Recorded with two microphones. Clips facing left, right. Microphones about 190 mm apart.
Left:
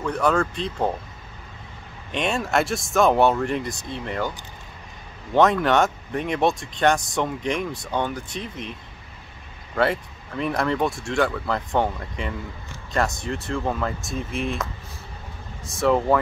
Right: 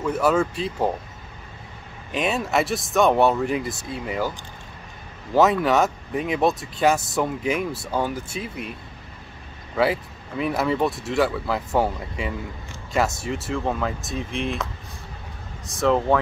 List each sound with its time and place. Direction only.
0.0 s speech: 5° right (ahead or behind)
2.1 s speech: 5° right (ahead or behind)
5.3 s speech: 5° right (ahead or behind)
9.8 s speech: 5° right (ahead or behind)